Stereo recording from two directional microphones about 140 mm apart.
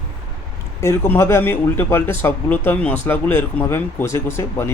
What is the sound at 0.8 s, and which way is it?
Speech, 15° left (ahead or behind).